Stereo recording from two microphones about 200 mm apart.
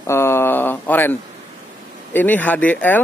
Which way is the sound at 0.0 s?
15° left (ahead or behind).